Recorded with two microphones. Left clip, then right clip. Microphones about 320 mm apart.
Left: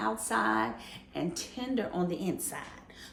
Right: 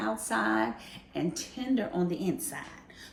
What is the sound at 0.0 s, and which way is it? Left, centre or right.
A woman's voice, centre.